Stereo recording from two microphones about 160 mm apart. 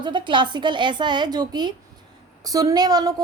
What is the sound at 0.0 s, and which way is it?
A woman's voice, 30° right (ahead or behind).